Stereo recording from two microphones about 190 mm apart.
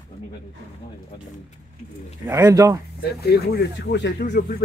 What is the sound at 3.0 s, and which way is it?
Speech, 60° left (ahead or behind).